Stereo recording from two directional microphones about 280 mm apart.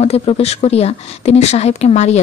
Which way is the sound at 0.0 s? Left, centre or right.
Left.